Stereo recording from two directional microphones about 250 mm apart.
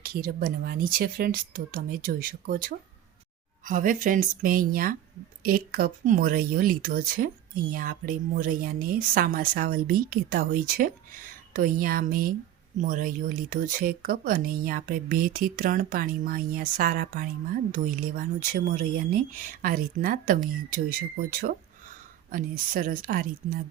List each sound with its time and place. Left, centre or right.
0.0 s speech: right